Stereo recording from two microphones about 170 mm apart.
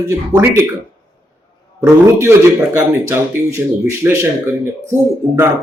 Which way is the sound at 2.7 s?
15° right (ahead or behind).